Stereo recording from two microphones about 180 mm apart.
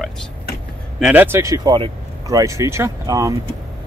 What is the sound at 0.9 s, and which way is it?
Speech, 5° right (ahead or behind).